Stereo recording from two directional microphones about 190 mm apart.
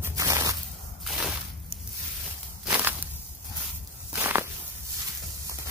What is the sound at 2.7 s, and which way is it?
Walk, 10° right (ahead or behind).